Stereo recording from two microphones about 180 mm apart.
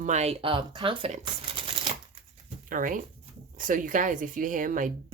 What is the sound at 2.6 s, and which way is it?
Speech, 50° right (ahead or behind).